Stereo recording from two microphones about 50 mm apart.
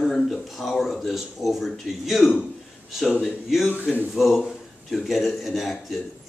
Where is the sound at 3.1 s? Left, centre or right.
Centre.